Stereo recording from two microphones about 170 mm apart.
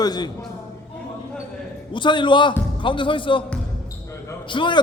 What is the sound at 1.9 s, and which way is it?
A man's voice, 30° left (ahead or behind).